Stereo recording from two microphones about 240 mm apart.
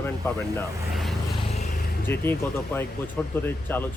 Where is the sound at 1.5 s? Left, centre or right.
Left.